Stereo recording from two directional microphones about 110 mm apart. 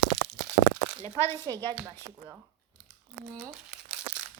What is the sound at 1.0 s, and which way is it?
Speech, 25° left (ahead or behind).